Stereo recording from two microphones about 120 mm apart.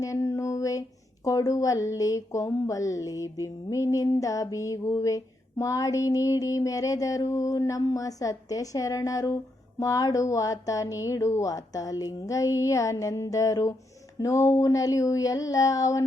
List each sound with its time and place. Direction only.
0.0 s speech: 25° left (ahead or behind)